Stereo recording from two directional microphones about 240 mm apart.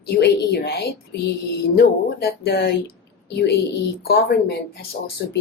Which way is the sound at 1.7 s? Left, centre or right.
Left.